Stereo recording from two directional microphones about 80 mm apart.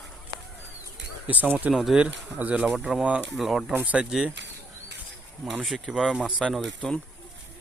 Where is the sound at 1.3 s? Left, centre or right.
Centre.